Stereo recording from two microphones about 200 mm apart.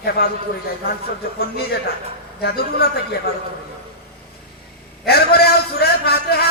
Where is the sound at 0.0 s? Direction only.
50° left (ahead or behind).